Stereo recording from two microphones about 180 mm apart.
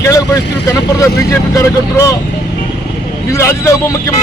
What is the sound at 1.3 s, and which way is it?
Speech, 15° left (ahead or behind).